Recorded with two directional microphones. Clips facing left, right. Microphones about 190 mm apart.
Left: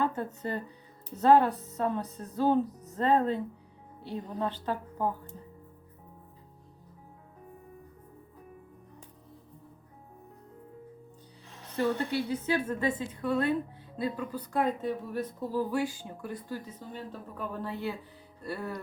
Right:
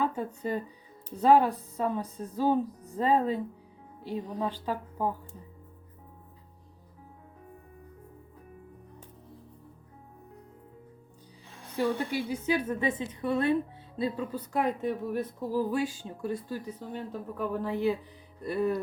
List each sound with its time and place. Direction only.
0.0 s speech: 10° right (ahead or behind)
11.8 s speech: 10° right (ahead or behind); by 14.6 s 25° right (ahead or behind)
14.8 s speech: 10° right (ahead or behind)